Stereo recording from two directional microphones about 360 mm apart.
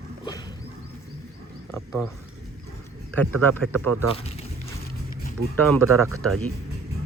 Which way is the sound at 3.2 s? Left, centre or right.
Centre.